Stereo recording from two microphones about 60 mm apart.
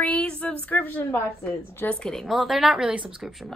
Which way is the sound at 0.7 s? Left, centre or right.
Left.